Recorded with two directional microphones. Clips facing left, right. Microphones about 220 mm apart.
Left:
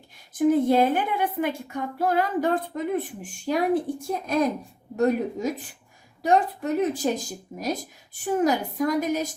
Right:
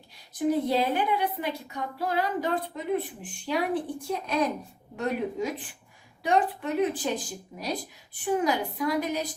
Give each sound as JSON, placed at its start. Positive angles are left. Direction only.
{"t": 0.3, "sound": "a woman's voice", "side_deg": 50}